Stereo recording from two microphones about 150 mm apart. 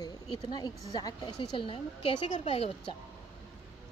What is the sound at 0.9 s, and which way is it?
A woman's voice, 30° left (ahead or behind).